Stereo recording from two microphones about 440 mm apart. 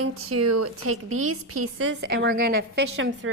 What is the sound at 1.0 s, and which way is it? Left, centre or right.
Speech, right.